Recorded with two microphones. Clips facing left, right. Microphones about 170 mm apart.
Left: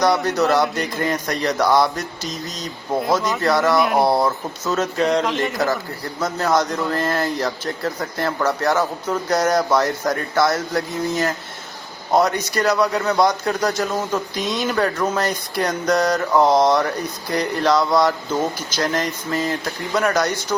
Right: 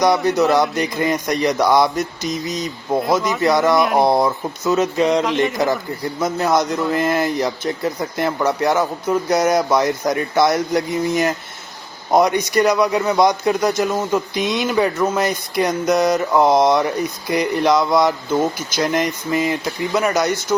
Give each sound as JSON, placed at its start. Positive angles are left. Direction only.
{"t": 0.1, "sound": "speech", "side_deg": -5}
{"t": 4.0, "sound": "speech", "side_deg": -15}
{"t": 6.1, "sound": "speech", "side_deg": -10}